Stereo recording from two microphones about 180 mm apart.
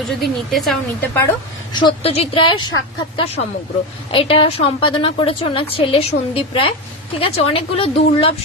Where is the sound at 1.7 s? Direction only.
30° left (ahead or behind).